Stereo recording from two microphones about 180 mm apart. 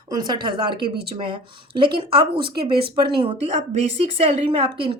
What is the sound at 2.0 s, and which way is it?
Speech, 25° right (ahead or behind).